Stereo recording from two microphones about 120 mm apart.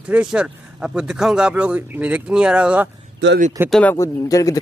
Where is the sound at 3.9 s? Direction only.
30° left (ahead or behind).